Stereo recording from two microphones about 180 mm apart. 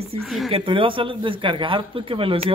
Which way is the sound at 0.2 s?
Centre (ahead or behind).